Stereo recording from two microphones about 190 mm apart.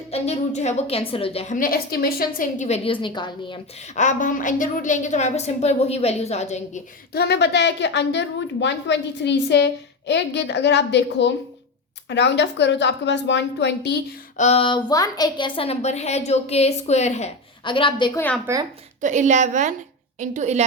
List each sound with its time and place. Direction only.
0.1 s a woman's voice: 35° left (ahead or behind)
3.9 s a woman's voice: 40° left (ahead or behind)
7.1 s a woman's voice: 60° left (ahead or behind)
14.3 s a woman's voice: 35° left (ahead or behind)
18.5 s speech: 15° right (ahead or behind)
19.0 s a woman's voice: 40° right (ahead or behind)